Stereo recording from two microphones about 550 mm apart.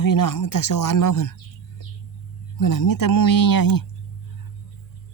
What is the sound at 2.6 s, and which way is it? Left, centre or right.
Speech, left.